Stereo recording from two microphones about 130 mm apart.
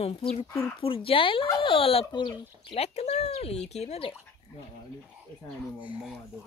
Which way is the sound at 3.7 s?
55° left (ahead or behind).